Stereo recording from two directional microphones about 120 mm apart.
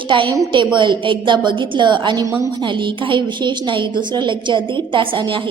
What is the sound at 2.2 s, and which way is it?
Speech, 25° right (ahead or behind).